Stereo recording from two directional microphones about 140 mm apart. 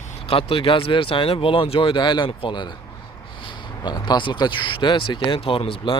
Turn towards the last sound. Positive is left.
turn(degrees=40)  # may be behind; listen again after turning